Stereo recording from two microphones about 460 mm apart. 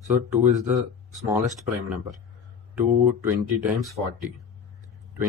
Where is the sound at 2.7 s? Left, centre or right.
Centre.